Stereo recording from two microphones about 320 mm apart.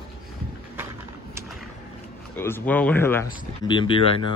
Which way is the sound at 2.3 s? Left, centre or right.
Centre.